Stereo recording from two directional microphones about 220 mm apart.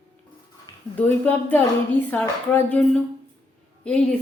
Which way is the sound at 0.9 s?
5° left (ahead or behind).